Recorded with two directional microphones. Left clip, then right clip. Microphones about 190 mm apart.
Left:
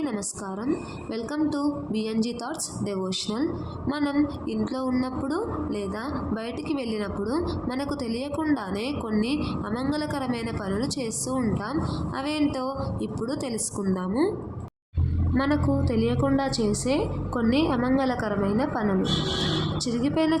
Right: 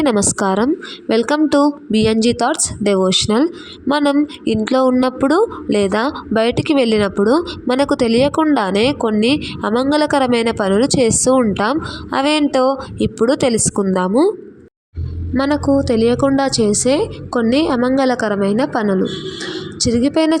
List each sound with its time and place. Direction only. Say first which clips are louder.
0.0 s a woman's voice: right 16 dB; 50° right (ahead or behind)
15.4 s a woman's voice: right 10 dB; 35° right (ahead or behind)